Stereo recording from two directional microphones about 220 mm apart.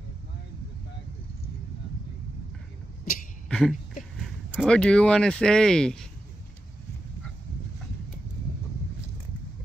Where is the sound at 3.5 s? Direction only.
Centre (ahead or behind).